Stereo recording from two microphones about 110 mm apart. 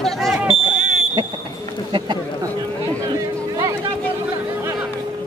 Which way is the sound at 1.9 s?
45° right (ahead or behind).